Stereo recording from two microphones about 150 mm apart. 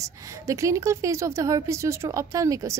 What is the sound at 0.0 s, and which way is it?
A woman's voice, 20° right (ahead or behind).